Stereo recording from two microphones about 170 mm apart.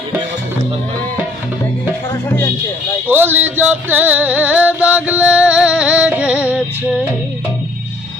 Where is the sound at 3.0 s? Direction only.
10° right (ahead or behind).